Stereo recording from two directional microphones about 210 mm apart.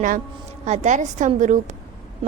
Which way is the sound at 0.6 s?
35° right (ahead or behind).